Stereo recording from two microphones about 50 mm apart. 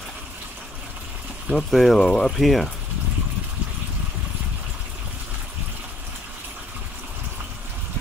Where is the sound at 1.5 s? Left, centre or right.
Centre.